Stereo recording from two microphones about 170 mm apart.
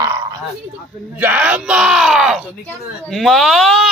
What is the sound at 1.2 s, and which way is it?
Speech, 10° right (ahead or behind).